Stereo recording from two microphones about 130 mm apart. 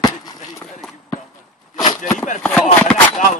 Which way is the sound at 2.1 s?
75° left (ahead or behind).